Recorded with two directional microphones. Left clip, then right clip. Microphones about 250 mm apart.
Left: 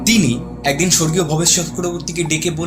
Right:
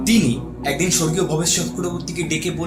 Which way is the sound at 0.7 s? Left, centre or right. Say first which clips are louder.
Left 4 dB; left.